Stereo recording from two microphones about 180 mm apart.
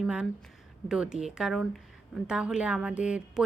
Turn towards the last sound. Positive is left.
turn(degrees=-5)  # may be behind; listen again after turning